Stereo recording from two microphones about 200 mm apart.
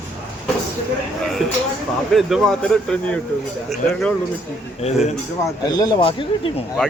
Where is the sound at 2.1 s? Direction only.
Centre (ahead or behind).